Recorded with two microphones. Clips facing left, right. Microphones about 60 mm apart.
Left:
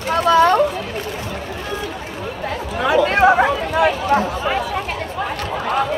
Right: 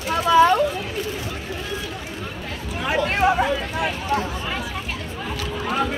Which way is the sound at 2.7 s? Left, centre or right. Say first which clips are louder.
Left 6 dB; left.